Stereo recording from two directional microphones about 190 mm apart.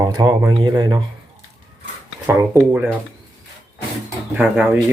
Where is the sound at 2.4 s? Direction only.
10° right (ahead or behind).